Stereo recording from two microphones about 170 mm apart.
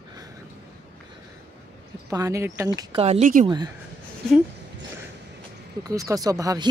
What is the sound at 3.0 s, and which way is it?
Speech, 40° right (ahead or behind).